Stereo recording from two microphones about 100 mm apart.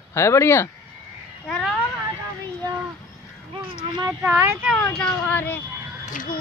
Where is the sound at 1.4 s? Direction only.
5° left (ahead or behind).